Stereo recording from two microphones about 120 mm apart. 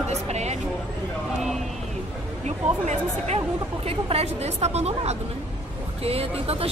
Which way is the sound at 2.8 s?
65° right (ahead or behind).